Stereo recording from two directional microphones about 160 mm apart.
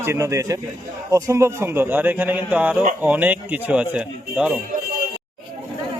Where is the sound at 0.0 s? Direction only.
20° right (ahead or behind).